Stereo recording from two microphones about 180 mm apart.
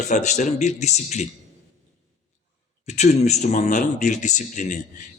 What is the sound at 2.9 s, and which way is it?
A man's voice, 40° left (ahead or behind).